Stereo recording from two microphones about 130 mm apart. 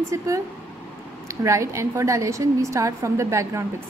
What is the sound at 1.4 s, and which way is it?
A woman's voice, 25° right (ahead or behind).